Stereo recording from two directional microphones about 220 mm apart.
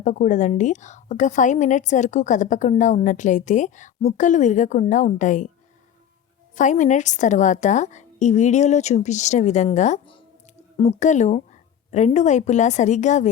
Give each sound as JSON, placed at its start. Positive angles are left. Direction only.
{"t": 0.0, "sound": "a woman's voice", "side_deg": 35}
{"t": 6.6, "sound": "a woman's voice", "side_deg": 35}